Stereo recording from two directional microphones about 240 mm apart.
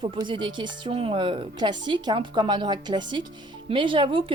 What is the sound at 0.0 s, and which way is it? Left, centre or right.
A woman's voice, centre.